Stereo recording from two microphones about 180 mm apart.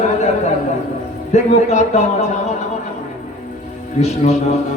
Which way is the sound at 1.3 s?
40° left (ahead or behind).